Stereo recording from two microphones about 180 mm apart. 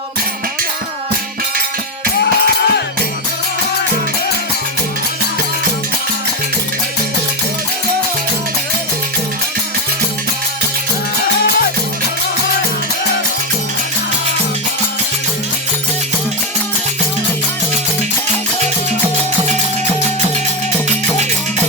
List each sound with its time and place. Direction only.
2.2 s music: 65° left (ahead or behind)